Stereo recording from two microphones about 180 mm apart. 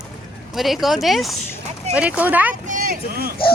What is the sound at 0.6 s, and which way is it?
Speech, centre (ahead or behind).